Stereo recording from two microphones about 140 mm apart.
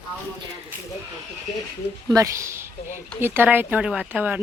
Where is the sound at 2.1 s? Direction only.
20° right (ahead or behind).